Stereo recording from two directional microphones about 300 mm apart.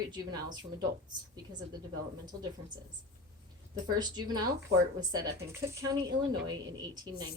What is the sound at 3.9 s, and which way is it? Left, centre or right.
A woman's voice, centre.